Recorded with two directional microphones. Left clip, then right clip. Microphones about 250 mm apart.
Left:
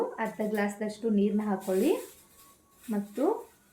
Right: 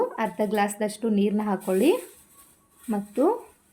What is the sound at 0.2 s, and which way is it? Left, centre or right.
A woman's voice, right.